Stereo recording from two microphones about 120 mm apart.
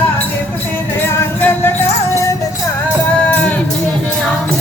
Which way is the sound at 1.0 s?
20° left (ahead or behind).